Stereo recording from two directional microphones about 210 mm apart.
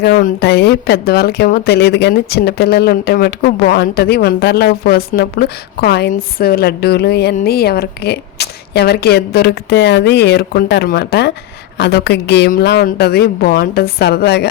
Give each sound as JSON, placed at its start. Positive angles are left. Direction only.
{"t": 0.0, "sound": "speech", "side_deg": 45}